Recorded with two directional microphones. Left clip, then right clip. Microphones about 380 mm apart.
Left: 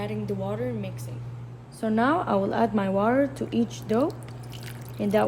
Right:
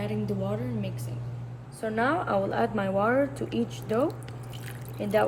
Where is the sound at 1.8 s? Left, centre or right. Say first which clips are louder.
Left 3 dB; left.